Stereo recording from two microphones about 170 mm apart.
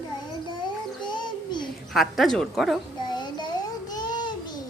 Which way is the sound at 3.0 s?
25° left (ahead or behind).